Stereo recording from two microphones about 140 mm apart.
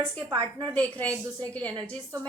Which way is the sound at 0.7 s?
10° left (ahead or behind).